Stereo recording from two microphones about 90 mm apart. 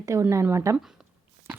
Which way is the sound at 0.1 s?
35° right (ahead or behind).